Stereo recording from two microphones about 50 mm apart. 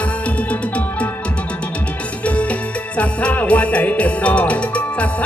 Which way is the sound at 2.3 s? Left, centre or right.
Left.